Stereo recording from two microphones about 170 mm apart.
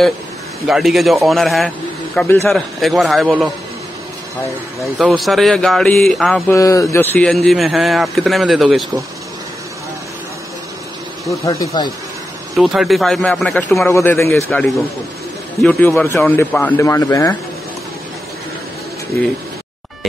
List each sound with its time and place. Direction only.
0.7 s speech: centre (ahead or behind)
2.1 s a man's voice: 10° left (ahead or behind)
2.5 s speech: centre (ahead or behind)
5.2 s speech: centre (ahead or behind)
6.5 s a man's voice: 20° left (ahead or behind)
7.4 s speech: centre (ahead or behind)
11.2 s speech: 20° left (ahead or behind)
12.5 s speech: centre (ahead or behind)
13.8 s a man's voice: 15° left (ahead or behind)
15.6 s a man's voice: 10° left (ahead or behind)